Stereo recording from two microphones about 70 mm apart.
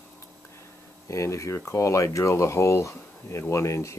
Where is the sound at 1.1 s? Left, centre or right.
Left.